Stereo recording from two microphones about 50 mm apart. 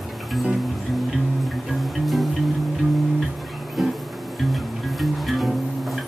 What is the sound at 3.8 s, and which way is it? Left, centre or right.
Music, centre.